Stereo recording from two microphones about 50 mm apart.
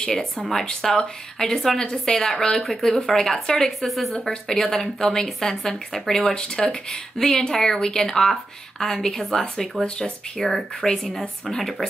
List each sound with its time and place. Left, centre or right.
0.4 s speech: centre
4.3 s speech: centre